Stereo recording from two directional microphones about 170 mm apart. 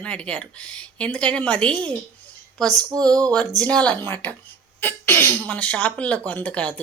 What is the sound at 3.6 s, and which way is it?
Speech, 5° left (ahead or behind).